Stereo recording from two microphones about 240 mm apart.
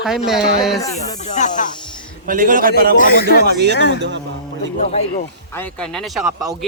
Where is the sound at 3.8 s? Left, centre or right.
Left.